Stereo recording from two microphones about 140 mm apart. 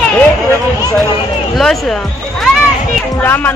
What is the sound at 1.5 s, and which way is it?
Speech, centre (ahead or behind).